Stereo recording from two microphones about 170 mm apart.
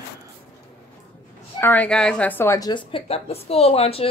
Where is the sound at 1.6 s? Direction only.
10° left (ahead or behind).